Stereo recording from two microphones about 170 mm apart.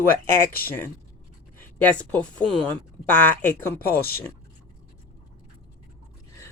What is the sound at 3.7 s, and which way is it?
Speech, 60° left (ahead or behind).